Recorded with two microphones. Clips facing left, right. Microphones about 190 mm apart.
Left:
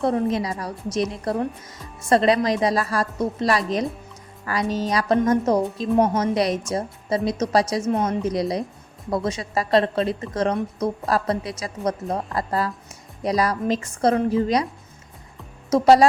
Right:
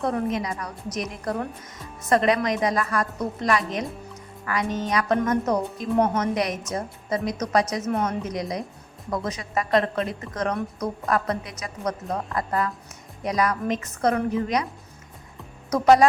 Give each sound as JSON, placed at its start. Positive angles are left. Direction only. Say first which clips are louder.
{"t": 0.0, "sound": "a woman's voice", "louder": "left 4 dB", "side_deg": 30}
{"t": 6.3, "sound": "a woman's voice", "louder": "left 4 dB", "side_deg": 30}
{"t": 15.7, "sound": "a woman's voice", "louder": "left 2 dB", "side_deg": 30}